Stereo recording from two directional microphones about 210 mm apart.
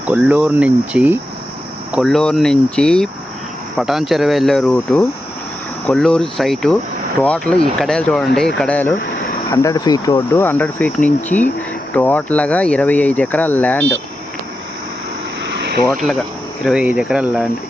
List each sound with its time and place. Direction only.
0.1 s speech: 5° right (ahead or behind)
15.9 s speech: centre (ahead or behind)